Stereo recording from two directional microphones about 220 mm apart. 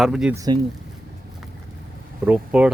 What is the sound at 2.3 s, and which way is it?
Speech, 5° right (ahead or behind).